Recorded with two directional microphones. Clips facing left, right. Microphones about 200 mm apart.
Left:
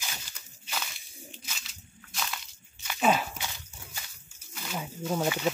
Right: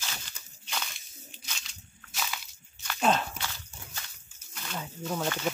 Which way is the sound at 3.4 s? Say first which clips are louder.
Even; 15° left (ahead or behind).